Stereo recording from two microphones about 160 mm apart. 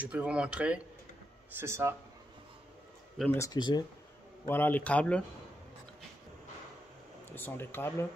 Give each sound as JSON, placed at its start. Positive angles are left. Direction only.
{"t": 0.0, "sound": "speech", "side_deg": -5}
{"t": 3.3, "sound": "speech", "side_deg": 25}
{"t": 4.5, "sound": "speech", "side_deg": 10}
{"t": 7.2, "sound": "speech", "side_deg": 15}